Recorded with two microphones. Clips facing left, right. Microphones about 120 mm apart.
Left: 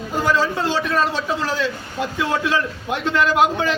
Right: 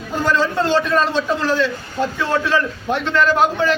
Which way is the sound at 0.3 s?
5° left (ahead or behind).